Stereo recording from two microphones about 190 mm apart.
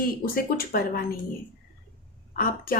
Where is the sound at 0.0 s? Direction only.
50° left (ahead or behind).